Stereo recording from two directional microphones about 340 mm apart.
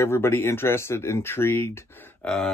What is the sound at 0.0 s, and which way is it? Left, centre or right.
Speech, centre.